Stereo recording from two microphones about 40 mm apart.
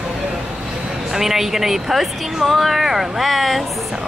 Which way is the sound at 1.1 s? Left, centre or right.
Centre.